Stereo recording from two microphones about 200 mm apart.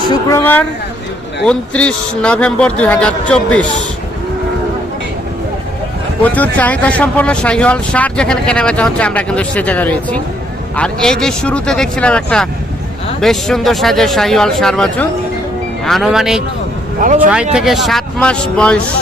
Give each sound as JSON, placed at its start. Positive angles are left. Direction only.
{"t": 0.1, "sound": "a man's voice", "side_deg": 15}
{"t": 6.2, "sound": "a man's voice", "side_deg": 10}
{"t": 17.0, "sound": "speech", "side_deg": -40}
{"t": 17.5, "sound": "a man's voice", "side_deg": 0}